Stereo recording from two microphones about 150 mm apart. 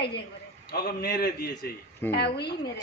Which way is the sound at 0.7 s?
90° left.